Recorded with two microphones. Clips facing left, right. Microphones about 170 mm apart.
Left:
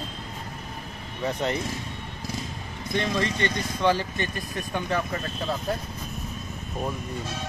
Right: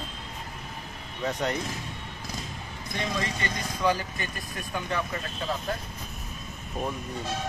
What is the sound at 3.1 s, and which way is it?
Speech, 30° left (ahead or behind).